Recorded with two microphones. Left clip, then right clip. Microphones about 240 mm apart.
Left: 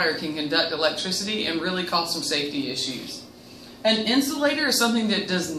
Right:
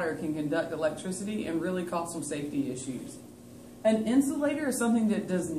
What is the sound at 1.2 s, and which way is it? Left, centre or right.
Speech, centre.